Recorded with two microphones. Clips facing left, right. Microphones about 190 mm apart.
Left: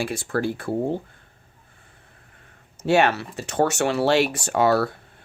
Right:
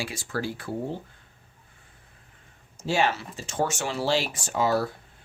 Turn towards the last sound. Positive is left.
turn(degrees=65)  # may be behind; listen again after turning